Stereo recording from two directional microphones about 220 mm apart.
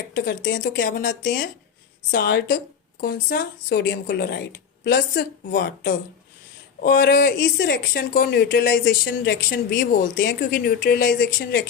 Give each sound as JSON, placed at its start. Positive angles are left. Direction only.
{"t": 0.3, "sound": "speech", "side_deg": 55}
{"t": 0.9, "sound": "speech", "side_deg": 35}
{"t": 2.0, "sound": "speech", "side_deg": 50}